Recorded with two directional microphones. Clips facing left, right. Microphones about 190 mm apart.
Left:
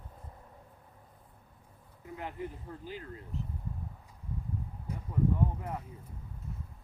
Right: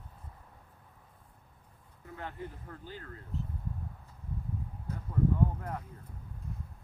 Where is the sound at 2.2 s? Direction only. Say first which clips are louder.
Left 2 dB; 15° left (ahead or behind).